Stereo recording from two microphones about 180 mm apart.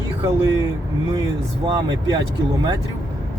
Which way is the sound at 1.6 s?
25° right (ahead or behind).